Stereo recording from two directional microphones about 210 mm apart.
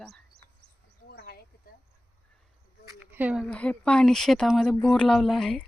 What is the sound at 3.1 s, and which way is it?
Speech, 5° right (ahead or behind).